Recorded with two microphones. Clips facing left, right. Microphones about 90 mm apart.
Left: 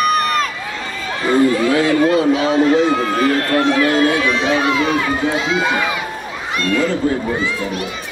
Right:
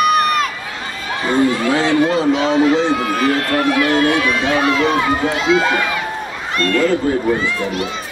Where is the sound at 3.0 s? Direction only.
35° left (ahead or behind); by 5.9 s 15° left (ahead or behind).